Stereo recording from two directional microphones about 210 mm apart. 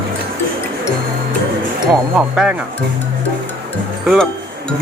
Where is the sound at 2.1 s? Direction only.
5° right (ahead or behind).